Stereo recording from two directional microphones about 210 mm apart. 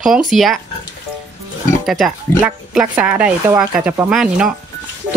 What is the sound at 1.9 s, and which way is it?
Speech, centre (ahead or behind).